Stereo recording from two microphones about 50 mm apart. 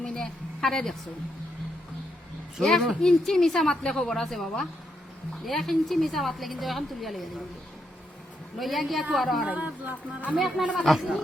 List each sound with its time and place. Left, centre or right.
0.0 s a woman's voice: centre
2.6 s a woman's voice: centre
5.5 s a woman's voice: centre
8.5 s a woman's voice: centre
9.5 s speech: right
10.3 s a woman's voice: centre